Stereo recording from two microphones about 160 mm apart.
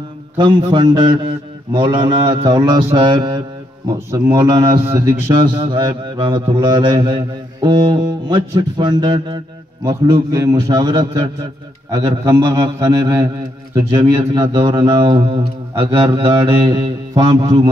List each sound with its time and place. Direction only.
0.4 s mantra: 30° right (ahead or behind)
13.7 s speech: 30° right (ahead or behind)